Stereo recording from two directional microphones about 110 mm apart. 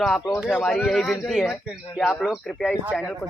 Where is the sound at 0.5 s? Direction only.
5° left (ahead or behind).